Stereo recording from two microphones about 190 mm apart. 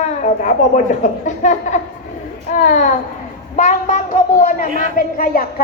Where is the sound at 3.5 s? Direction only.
40° left (ahead or behind).